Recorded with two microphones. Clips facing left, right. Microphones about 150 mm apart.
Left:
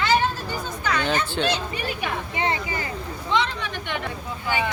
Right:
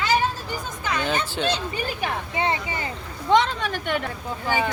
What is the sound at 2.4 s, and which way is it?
Speech, 25° right (ahead or behind).